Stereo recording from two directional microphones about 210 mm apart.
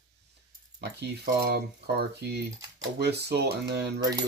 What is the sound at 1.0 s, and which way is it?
Speech, 50° right (ahead or behind).